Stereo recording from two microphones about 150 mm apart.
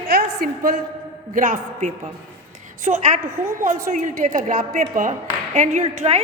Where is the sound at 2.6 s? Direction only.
55° right (ahead or behind).